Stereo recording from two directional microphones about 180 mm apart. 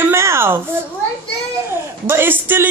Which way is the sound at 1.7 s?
15° right (ahead or behind).